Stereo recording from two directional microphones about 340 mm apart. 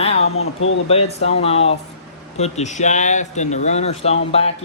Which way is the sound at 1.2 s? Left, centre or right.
Centre.